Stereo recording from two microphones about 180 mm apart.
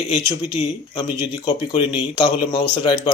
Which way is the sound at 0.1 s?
25° left (ahead or behind).